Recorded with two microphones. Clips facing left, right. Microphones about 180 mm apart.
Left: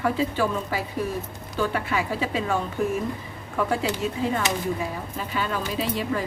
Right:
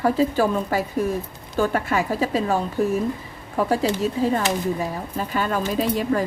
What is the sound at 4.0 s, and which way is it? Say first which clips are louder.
Speech: right 4 dB; 40° right (ahead or behind).